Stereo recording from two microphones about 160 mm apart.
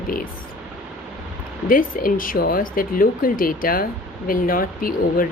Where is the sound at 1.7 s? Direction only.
60° left (ahead or behind).